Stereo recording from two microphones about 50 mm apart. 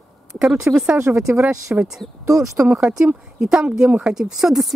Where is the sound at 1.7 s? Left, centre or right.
Right.